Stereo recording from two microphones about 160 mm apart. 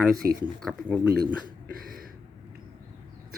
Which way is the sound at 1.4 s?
65° right (ahead or behind).